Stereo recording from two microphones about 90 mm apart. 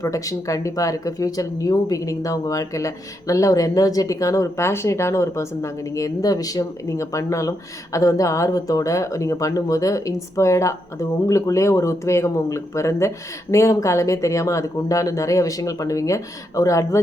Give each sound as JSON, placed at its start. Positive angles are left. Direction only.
{"t": 0.0, "sound": "speech", "side_deg": 40}